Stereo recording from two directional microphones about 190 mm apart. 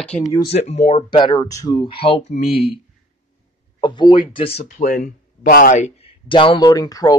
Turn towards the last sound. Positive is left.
turn(degrees=20)  # may be behind; listen again after turning